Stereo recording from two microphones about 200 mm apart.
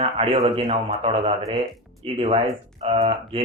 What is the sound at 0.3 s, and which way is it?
A man's voice, 25° right (ahead or behind).